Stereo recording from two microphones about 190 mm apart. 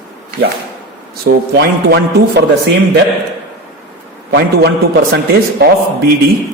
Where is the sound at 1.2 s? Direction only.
60° right (ahead or behind).